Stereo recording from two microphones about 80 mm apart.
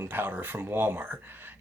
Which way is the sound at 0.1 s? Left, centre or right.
Right.